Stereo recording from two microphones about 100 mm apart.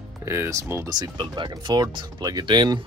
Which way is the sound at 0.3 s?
30° right (ahead or behind).